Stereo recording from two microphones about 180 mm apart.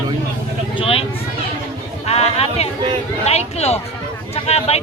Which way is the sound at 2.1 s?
35° left (ahead or behind).